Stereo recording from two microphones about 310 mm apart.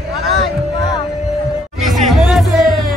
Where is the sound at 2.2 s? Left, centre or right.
Centre.